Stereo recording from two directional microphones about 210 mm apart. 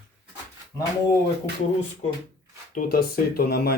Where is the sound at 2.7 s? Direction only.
45° left (ahead or behind).